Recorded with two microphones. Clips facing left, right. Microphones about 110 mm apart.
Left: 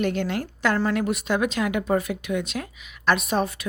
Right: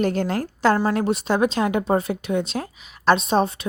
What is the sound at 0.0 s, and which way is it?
A woman's voice, 35° right (ahead or behind).